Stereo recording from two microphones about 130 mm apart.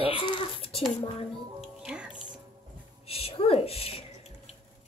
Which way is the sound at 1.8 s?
5° right (ahead or behind).